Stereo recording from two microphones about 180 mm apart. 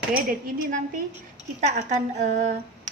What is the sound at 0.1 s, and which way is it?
Speech, 50° right (ahead or behind).